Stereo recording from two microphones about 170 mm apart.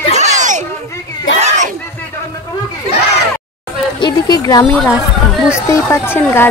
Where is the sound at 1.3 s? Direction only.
45° right (ahead or behind).